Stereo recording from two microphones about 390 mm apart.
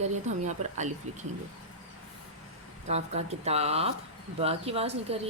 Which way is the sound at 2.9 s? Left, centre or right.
Centre.